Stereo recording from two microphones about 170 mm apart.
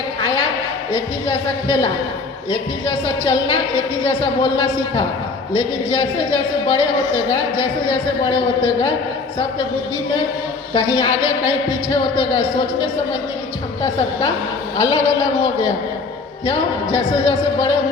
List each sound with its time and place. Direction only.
0.9 s a woman's voice: 30° left (ahead or behind)
10.8 s a woman's voice: 30° left (ahead or behind)
14.8 s a woman's voice: 30° left (ahead or behind)